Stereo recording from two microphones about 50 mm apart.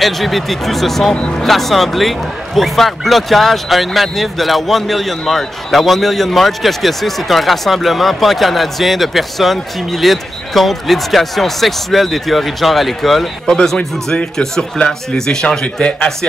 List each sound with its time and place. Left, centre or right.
0.0 s speech: centre
1.1 s speech: left
1.4 s speech: centre
13.5 s speech: centre
15.6 s speech: left